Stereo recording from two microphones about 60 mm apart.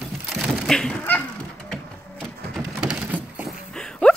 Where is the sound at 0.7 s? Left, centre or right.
Centre.